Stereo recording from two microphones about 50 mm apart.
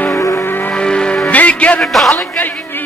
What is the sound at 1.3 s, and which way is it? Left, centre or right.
Music, left.